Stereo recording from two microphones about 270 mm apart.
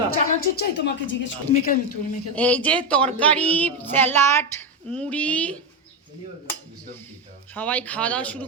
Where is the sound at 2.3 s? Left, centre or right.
Centre.